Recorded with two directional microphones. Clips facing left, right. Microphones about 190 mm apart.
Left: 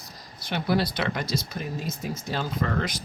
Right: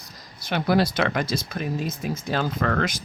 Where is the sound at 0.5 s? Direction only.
90° right.